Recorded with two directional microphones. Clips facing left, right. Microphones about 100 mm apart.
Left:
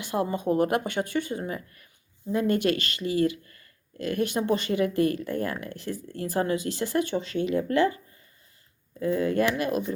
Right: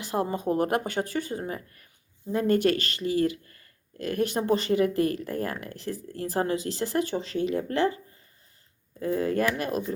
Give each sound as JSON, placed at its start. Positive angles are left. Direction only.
{"t": 0.0, "sound": "speech", "side_deg": -35}
{"t": 9.0, "sound": "speech", "side_deg": -35}